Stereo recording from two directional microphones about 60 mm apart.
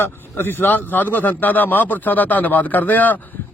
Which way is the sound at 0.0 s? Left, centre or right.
Left.